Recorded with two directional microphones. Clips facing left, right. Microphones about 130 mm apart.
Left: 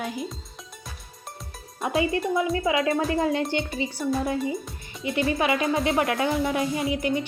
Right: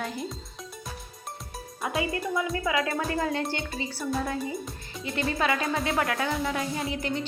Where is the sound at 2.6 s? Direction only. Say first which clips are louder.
Left 4 dB; 25° left (ahead or behind).